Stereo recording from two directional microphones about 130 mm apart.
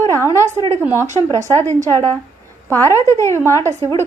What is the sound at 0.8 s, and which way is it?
Speech, 15° right (ahead or behind).